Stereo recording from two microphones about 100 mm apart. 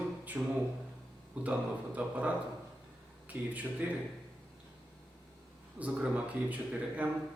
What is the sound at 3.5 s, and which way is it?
Speech, 15° right (ahead or behind).